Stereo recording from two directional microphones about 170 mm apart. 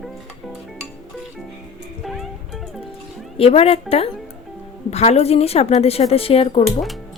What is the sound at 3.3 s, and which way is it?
Speech, 35° left (ahead or behind).